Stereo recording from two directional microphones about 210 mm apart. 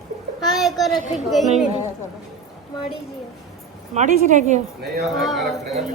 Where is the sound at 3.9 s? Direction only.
35° right (ahead or behind).